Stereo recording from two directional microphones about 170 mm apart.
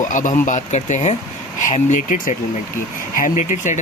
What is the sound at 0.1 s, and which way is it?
Speech, 50° left (ahead or behind).